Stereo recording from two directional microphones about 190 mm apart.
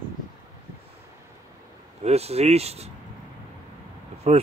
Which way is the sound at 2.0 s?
35° right (ahead or behind).